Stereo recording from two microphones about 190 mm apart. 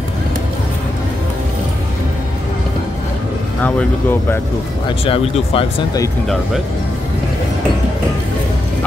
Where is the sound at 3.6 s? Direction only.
10° left (ahead or behind).